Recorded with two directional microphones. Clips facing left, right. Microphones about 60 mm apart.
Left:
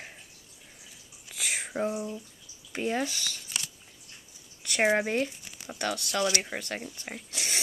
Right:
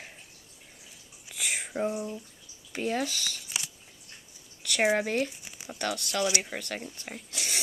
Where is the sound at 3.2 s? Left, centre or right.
Centre.